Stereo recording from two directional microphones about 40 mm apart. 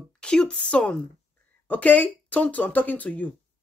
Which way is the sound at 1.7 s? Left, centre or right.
Left.